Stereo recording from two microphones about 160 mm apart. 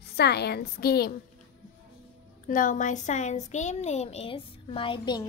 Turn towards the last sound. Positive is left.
turn(degrees=30)  # may be behind; listen again after turning